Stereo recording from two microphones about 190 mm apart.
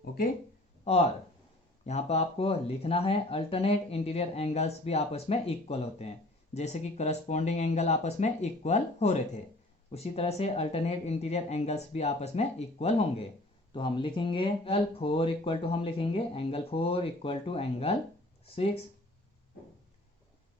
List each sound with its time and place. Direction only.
0.9 s speech: 35° left (ahead or behind)